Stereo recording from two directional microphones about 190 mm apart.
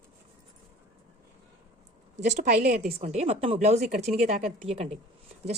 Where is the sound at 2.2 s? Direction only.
40° right (ahead or behind).